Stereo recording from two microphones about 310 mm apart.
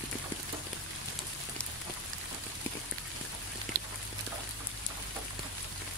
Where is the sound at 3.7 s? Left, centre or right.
Right.